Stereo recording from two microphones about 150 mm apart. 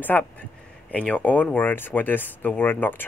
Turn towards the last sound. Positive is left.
turn(degrees=10)  # may be behind; listen again after turning